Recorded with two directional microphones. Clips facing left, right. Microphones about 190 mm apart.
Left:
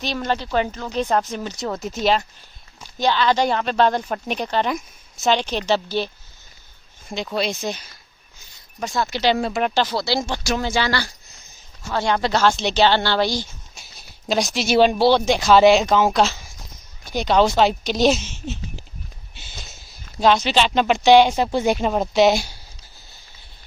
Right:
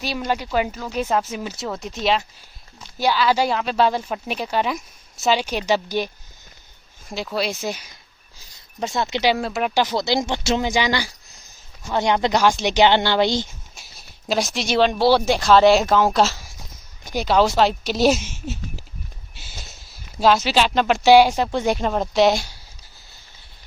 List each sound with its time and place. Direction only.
0.0 s speech: 10° right (ahead or behind)
7.1 s speech: 5° right (ahead or behind)
8.8 s speech: 20° right (ahead or behind)
9.2 s speech: 5° right (ahead or behind)
9.8 s speech: 20° right (ahead or behind)
13.7 s speech: centre (ahead or behind)
15.0 s speech: 5° right (ahead or behind)